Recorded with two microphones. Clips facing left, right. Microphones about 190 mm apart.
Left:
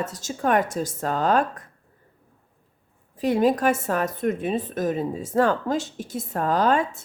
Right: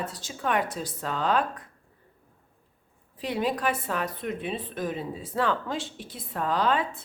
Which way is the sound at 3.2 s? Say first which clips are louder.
Left 8 dB; 45° left (ahead or behind).